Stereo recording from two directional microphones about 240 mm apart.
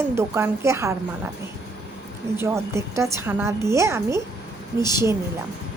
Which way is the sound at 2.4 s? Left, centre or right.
Centre.